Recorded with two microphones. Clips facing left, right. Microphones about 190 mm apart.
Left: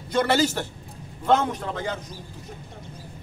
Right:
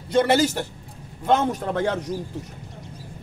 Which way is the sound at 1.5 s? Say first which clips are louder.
Right 6 dB; 60° right (ahead or behind).